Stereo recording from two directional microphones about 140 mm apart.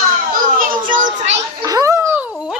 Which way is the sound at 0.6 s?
65° right (ahead or behind).